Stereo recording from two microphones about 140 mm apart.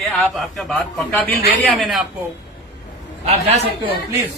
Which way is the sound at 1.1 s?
10° left (ahead or behind).